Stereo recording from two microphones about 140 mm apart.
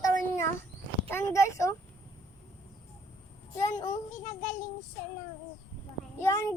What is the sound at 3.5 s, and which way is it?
Speech, 20° left (ahead or behind).